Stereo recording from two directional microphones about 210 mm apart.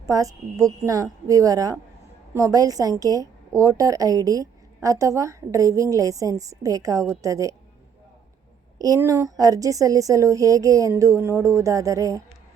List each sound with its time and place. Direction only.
0.0 s a woman's voice: 15° right (ahead or behind)
8.8 s a woman's voice: 15° right (ahead or behind)